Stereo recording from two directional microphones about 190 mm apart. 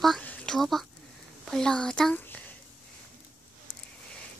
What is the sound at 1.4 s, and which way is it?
A woman's voice, 5° left (ahead or behind).